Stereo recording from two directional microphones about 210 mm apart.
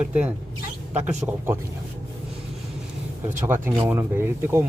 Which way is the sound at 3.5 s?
10° right (ahead or behind).